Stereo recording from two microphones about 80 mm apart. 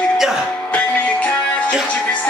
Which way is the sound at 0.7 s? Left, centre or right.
Centre.